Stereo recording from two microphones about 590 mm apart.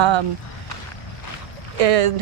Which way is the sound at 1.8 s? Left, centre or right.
Right.